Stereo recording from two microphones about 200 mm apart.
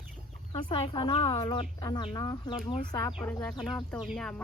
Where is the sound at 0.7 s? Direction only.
25° left (ahead or behind).